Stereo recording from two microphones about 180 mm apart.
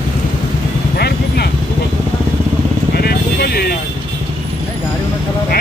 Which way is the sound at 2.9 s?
60° left (ahead or behind).